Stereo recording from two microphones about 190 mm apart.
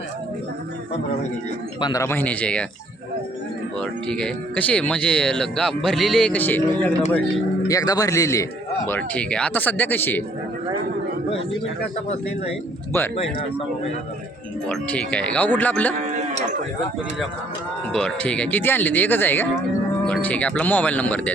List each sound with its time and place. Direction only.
1.8 s speech: 20° left (ahead or behind)
3.8 s speech: 5° left (ahead or behind)
14.7 s speech: 5° left (ahead or behind)
16.0 s livestock: 35° right (ahead or behind)
17.9 s speech: 5° left (ahead or behind)